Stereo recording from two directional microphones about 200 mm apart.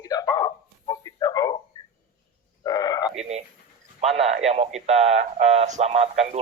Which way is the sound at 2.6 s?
20° left (ahead or behind).